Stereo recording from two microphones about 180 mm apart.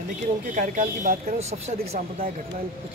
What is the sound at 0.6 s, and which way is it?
Speech, 50° right (ahead or behind).